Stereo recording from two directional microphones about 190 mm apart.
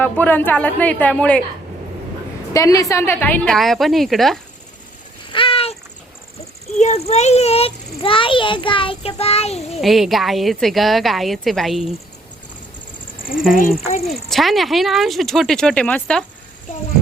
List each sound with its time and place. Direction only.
0.0 s speech: 10° left (ahead or behind)
2.5 s a woman's voice: 15° left (ahead or behind); by 4.4 s centre (ahead or behind)
5.3 s cat: 30° left (ahead or behind)
6.7 s a child's voice: 35° left (ahead or behind)
9.8 s a woman's voice: centre (ahead or behind)
13.8 s a child's voice: 35° left (ahead or behind)
14.1 s a woman's voice: centre (ahead or behind)